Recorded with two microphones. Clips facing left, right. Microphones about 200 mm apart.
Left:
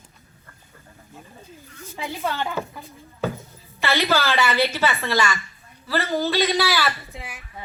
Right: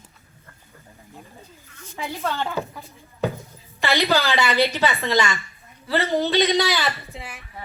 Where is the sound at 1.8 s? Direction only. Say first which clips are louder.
Even; 10° left (ahead or behind).